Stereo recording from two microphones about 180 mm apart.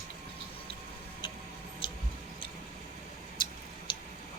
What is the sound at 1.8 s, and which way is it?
Tick-tock, 30° left (ahead or behind).